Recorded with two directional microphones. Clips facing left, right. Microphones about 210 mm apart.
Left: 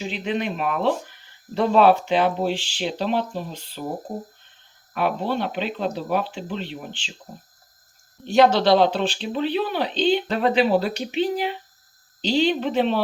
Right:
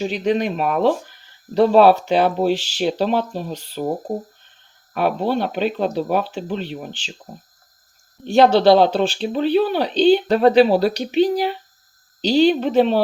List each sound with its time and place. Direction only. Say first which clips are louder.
0.0 s speech: right 6 dB; 40° right (ahead or behind)
8.3 s speech: right 4 dB; 30° right (ahead or behind)